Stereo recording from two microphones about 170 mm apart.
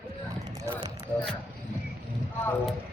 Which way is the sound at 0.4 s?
25° right (ahead or behind).